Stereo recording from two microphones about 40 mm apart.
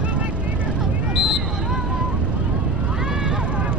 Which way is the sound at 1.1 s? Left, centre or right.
Centre.